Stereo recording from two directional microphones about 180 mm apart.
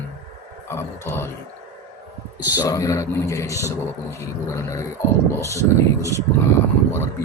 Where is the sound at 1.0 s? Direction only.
15° left (ahead or behind).